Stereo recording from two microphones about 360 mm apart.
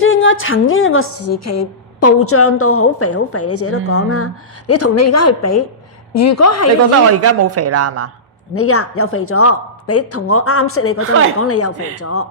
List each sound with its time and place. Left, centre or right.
0.0 s a woman's voice: left
7.1 s a woman's voice: right
8.5 s a woman's voice: left